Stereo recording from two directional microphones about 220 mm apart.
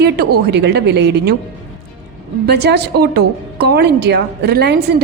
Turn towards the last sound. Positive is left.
turn(degrees=-50)  # may be behind; listen again after turning